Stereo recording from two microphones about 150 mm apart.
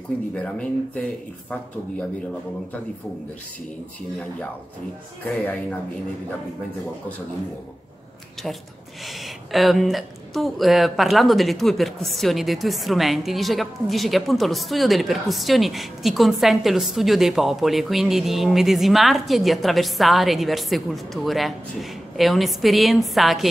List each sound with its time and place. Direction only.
0.3 s speech: 10° left (ahead or behind)
5.4 s speech: 10° left (ahead or behind)
9.0 s speech: centre (ahead or behind)